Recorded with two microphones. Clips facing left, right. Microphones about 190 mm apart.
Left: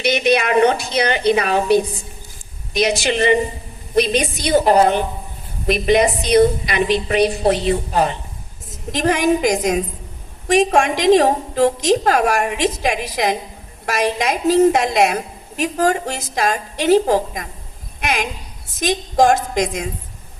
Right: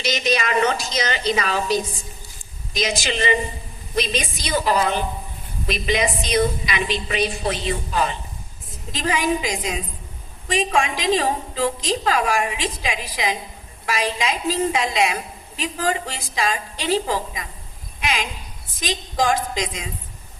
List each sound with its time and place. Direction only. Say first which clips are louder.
0.0 s a woman's voice: left 6 dB; 60° left (ahead or behind)
9.5 s a woman's voice: left 9 dB; 45° left (ahead or behind)
10.7 s a woman's voice: left 5 dB; 65° left (ahead or behind); by 16.6 s 45° left (ahead or behind)
16.7 s a woman's voice: left 11 dB; 55° left (ahead or behind)